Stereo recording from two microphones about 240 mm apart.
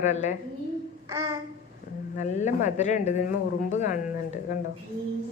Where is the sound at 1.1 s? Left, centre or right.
Centre.